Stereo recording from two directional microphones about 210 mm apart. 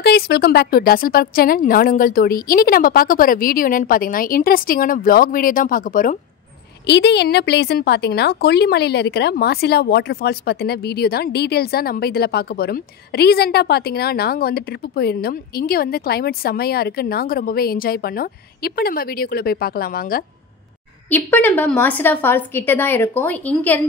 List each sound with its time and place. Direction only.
0.0 s a woman's voice: 50° left (ahead or behind)
6.9 s a woman's voice: 55° left (ahead or behind)
21.1 s a woman's voice: 10° left (ahead or behind)